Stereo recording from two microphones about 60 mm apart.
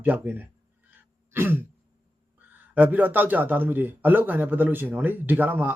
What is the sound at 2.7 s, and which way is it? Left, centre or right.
A man's voice, right.